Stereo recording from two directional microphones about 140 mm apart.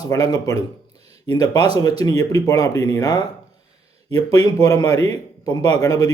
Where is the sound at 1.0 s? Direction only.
30° left (ahead or behind).